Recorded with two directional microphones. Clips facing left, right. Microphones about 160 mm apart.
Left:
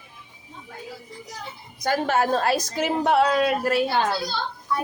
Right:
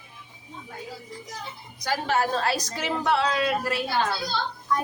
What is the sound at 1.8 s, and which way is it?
A woman's voice, 50° left (ahead or behind).